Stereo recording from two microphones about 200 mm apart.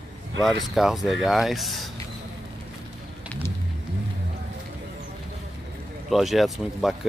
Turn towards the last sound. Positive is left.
turn(degrees=0)  # may be behind; listen again after turning